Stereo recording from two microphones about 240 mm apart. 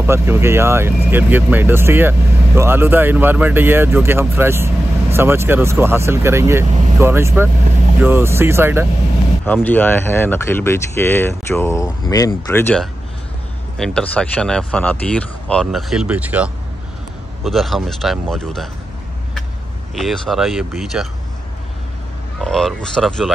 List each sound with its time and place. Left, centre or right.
0.0 s speech: centre
9.5 s speech: centre
20.0 s speech: centre
22.4 s speech: centre